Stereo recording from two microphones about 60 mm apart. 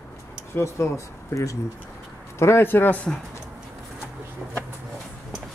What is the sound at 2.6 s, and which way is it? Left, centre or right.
Speech, left.